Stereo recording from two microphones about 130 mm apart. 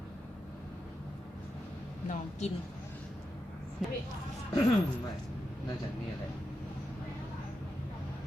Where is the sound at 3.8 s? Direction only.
5° right (ahead or behind).